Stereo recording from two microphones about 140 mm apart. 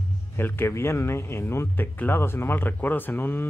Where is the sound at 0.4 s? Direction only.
15° left (ahead or behind).